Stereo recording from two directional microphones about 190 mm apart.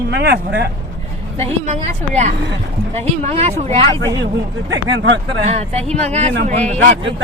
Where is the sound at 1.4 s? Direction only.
40° right (ahead or behind).